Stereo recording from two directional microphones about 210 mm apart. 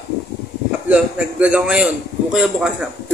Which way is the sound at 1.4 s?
5° right (ahead or behind).